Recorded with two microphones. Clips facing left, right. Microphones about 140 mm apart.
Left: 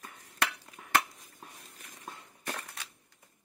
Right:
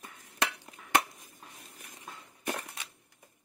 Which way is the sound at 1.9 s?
15° right (ahead or behind).